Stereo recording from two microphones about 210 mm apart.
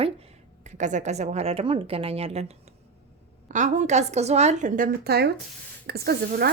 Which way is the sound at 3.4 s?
35° right (ahead or behind).